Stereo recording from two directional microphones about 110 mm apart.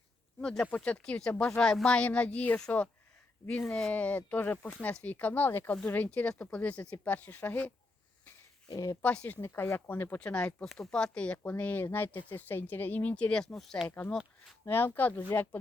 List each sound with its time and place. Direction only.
0.3 s speech: 5° left (ahead or behind)
8.7 s speech: 30° left (ahead or behind)
9.0 s speech: 15° left (ahead or behind)
13.8 s speech: 15° left (ahead or behind)